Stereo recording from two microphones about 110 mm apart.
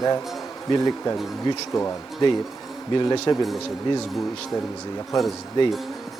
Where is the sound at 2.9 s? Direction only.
45° left (ahead or behind).